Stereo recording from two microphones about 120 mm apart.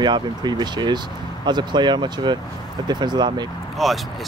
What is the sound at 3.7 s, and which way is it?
Speech, centre (ahead or behind).